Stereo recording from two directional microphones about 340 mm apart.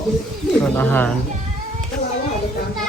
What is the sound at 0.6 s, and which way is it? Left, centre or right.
Speech, centre.